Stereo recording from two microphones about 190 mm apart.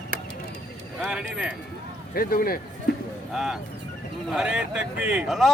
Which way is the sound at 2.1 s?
50° left (ahead or behind).